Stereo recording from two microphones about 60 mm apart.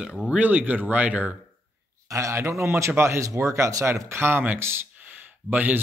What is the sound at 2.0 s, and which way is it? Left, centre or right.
A man's voice, right.